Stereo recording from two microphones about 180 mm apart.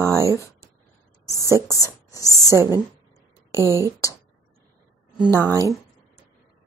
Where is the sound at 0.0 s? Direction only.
15° right (ahead or behind).